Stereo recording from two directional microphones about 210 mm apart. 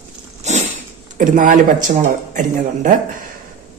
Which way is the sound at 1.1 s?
40° right (ahead or behind).